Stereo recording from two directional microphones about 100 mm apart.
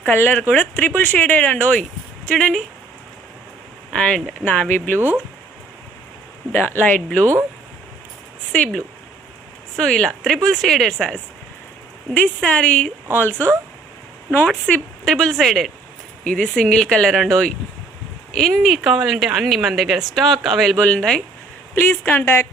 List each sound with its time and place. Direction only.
0.0 s speech: 20° left (ahead or behind)
3.9 s speech: 10° left (ahead or behind)
4.9 s speech: 15° right (ahead or behind)
6.5 s speech: 20° left (ahead or behind)
8.5 s speech: 10° left (ahead or behind)
14.3 s speech: 15° left (ahead or behind)
21.8 s speech: 20° left (ahead or behind)